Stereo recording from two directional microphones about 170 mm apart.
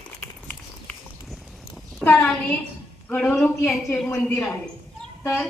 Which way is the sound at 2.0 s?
10° left (ahead or behind).